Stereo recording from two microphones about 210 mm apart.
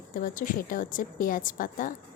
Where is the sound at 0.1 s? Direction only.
40° left (ahead or behind).